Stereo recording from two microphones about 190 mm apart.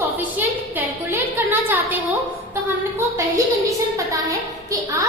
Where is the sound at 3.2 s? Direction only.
15° right (ahead or behind).